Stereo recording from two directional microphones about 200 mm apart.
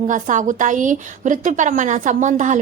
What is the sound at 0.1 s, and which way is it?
A woman's voice, 40° right (ahead or behind).